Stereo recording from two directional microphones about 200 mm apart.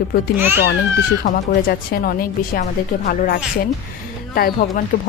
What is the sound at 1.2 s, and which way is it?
Speech, 45° left (ahead or behind).